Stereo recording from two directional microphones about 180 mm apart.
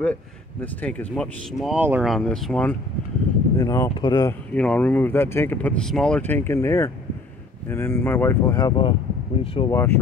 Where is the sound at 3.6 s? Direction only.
20° left (ahead or behind).